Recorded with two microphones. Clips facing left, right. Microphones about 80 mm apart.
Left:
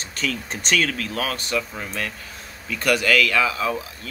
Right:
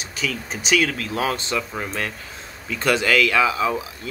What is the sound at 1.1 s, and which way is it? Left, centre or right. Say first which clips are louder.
Speech: right 2 dB; right.